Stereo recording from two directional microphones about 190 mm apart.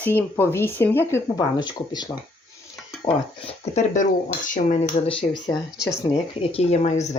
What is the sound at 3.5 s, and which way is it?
Speech, 40° left (ahead or behind).